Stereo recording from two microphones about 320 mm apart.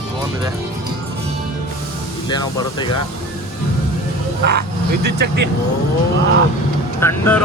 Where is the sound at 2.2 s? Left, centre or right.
Centre.